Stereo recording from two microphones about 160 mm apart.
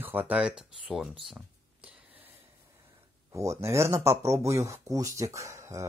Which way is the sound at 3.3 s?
20° right (ahead or behind).